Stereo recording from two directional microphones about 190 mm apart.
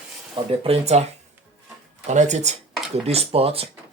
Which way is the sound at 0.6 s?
30° right (ahead or behind).